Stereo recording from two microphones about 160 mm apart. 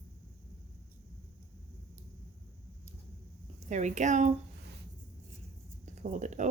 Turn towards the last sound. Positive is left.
turn(degrees=-50)  # may be behind; listen again after turning